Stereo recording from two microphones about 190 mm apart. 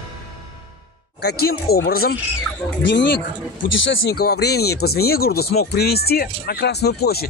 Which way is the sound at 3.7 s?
80° left.